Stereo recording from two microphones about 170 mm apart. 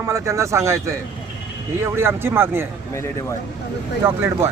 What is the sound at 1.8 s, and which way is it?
Speech, 15° right (ahead or behind).